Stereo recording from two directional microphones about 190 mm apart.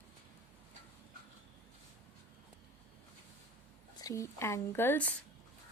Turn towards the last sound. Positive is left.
turn(degrees=10)  # may be behind; listen again after turning